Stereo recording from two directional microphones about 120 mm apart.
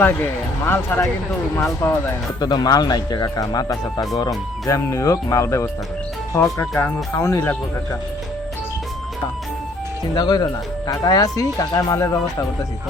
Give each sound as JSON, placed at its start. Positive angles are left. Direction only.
{"t": 0.0, "sound": "speech", "side_deg": 20}
{"t": 2.4, "sound": "speech", "side_deg": 35}
{"t": 10.2, "sound": "speech", "side_deg": 35}